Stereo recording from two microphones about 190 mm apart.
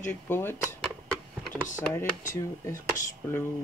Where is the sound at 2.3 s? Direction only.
15° left (ahead or behind).